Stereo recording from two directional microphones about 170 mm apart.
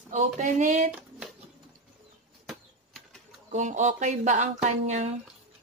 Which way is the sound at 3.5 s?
45° right (ahead or behind).